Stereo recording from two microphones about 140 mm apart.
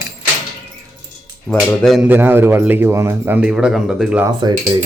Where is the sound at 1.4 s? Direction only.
Centre (ahead or behind).